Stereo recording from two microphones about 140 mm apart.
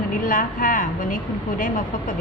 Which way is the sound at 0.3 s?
70° left (ahead or behind).